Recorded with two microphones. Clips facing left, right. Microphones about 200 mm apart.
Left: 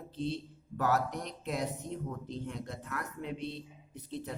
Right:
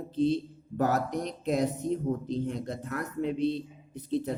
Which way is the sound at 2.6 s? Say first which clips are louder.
Right 6 dB; 40° right (ahead or behind).